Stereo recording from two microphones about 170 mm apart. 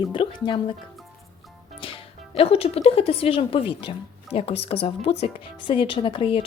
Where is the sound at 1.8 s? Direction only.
35° left (ahead or behind).